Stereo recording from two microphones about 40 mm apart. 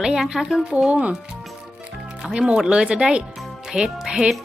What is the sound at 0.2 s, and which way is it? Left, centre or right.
Speech, centre.